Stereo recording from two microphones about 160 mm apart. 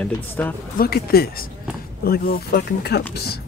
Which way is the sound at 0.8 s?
75° left (ahead or behind).